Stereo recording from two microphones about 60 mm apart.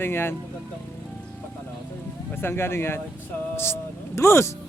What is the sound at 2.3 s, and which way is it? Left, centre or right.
Speech, left.